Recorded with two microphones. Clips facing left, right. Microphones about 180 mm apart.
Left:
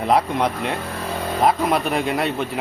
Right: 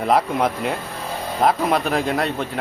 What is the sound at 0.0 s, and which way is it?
Speech, centre (ahead or behind).